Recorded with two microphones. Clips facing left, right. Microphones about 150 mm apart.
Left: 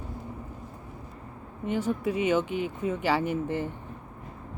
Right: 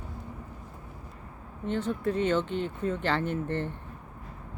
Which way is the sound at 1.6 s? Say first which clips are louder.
Left 1 dB; 10° left (ahead or behind).